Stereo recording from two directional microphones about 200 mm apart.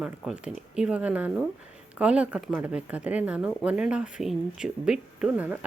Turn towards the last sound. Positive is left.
turn(degrees=-5)  # may be behind; listen again after turning